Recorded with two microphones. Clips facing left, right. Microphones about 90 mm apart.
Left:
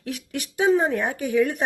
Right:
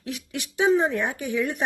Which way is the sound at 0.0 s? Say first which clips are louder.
Left 2 dB; 40° left (ahead or behind).